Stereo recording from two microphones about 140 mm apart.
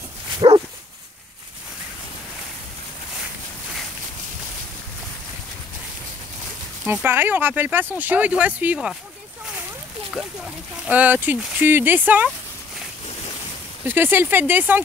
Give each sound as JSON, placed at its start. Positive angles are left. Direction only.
{"t": 0.4, "sound": "dog", "side_deg": -35}
{"t": 6.9, "sound": "speech", "side_deg": -15}
{"t": 10.1, "sound": "speech", "side_deg": -5}
{"t": 13.8, "sound": "speech", "side_deg": -15}